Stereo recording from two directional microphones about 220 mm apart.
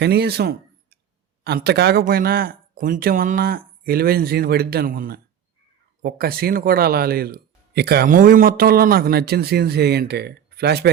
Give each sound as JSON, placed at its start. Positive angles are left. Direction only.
{"t": 0.0, "sound": "speech", "side_deg": -45}